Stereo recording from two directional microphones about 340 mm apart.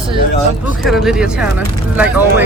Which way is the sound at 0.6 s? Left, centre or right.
Centre.